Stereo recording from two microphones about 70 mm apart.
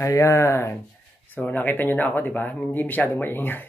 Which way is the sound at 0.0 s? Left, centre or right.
Left.